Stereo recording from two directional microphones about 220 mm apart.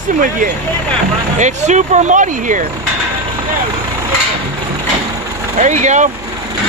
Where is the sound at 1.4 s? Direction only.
35° right (ahead or behind).